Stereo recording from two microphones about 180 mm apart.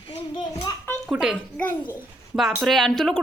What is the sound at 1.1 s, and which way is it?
Speech, 5° right (ahead or behind).